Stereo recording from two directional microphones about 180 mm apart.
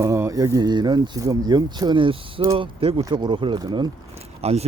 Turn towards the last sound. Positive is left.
turn(degrees=-35)  # may be behind; listen again after turning